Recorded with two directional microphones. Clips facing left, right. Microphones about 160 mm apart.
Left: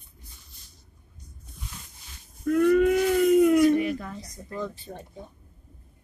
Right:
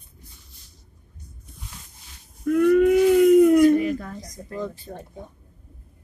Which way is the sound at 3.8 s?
40° right (ahead or behind).